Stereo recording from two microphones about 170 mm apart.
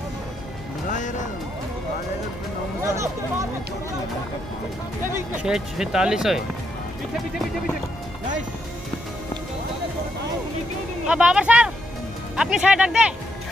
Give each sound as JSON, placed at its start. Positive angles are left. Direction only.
{"t": 0.8, "sound": "music", "side_deg": 45}
{"t": 2.8, "sound": "speech", "side_deg": -15}
{"t": 5.4, "sound": "speech", "side_deg": -5}
{"t": 11.1, "sound": "speech", "side_deg": -5}